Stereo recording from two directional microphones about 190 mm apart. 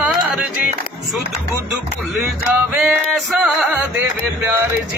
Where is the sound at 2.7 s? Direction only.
Centre (ahead or behind).